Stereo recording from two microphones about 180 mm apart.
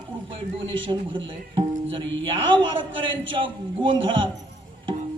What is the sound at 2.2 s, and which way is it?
A man's voice, 30° right (ahead or behind).